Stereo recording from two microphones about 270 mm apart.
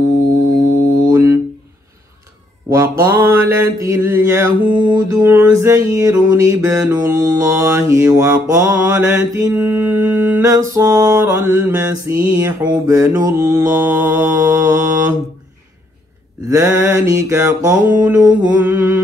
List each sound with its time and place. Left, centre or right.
1.1 s a sound: centre
2.7 s mantra: centre
16.4 s mantra: centre